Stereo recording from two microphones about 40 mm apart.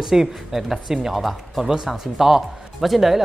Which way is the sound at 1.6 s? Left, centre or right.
Centre.